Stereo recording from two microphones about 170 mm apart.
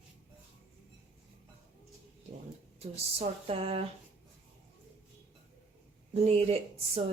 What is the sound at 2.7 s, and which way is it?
Speech, 35° right (ahead or behind).